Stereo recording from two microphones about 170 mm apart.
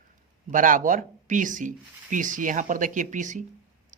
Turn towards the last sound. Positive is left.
turn(degrees=-45)  # may be behind; listen again after turning